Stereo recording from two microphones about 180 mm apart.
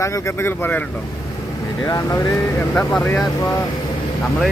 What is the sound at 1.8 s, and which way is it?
Speech, 20° left (ahead or behind).